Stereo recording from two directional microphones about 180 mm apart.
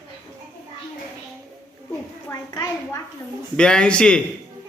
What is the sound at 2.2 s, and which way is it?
Speech, 15° left (ahead or behind).